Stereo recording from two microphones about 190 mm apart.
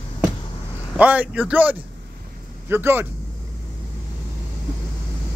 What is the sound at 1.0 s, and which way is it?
Speech, 10° right (ahead or behind).